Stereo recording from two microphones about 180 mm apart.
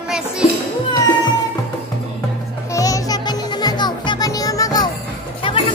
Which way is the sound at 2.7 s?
20° left (ahead or behind).